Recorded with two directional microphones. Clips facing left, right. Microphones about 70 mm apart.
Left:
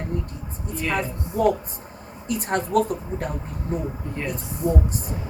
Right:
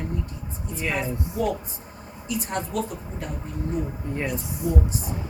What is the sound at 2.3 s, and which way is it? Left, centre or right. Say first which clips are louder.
Speech: left 6 dB; left.